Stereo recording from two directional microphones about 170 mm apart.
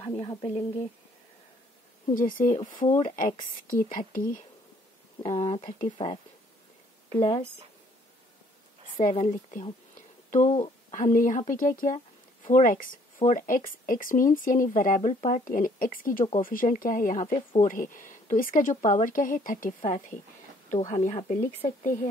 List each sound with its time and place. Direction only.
0.0 s speech: 30° left (ahead or behind)
2.1 s speech: 55° left (ahead or behind)
3.7 s speech: 55° left (ahead or behind)
5.2 s speech: 35° left (ahead or behind)
6.0 s speech: 25° left (ahead or behind)
7.2 s speech: 30° left (ahead or behind)
9.0 s speech: 45° left (ahead or behind)
9.9 s a sound: 45° left (ahead or behind)
10.6 s speech: 45° left (ahead or behind)